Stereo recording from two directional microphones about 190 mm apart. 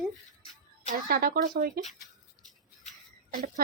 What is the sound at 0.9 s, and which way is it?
Speech, 50° right (ahead or behind).